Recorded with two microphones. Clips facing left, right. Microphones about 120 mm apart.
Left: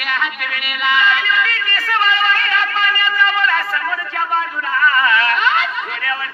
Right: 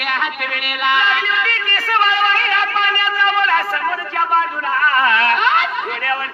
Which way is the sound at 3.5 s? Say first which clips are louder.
Right 2 dB; 40° right (ahead or behind).